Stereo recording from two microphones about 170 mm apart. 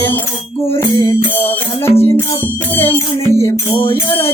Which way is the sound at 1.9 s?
10° left (ahead or behind).